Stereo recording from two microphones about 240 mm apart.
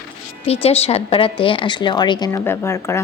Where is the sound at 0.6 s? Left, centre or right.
Left.